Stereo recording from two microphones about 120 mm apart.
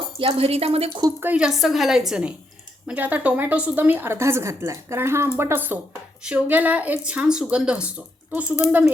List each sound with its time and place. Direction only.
0.2 s speech: 50° right (ahead or behind)
1.2 s a woman's voice: 10° right (ahead or behind)